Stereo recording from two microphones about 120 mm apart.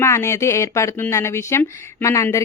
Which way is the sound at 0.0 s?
25° left (ahead or behind).